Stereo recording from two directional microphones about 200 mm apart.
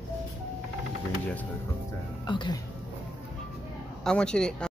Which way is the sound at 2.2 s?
25° left (ahead or behind).